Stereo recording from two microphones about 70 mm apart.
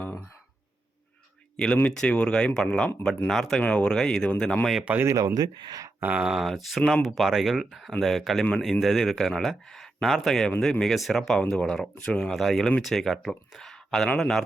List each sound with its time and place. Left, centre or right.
1.5 s speech: centre
3.6 s speech: centre
5.0 s speech: right
6.0 s speech: right
6.2 s speech: centre
12.3 s speech: centre